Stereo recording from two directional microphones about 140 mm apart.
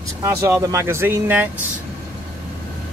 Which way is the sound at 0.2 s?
20° right (ahead or behind).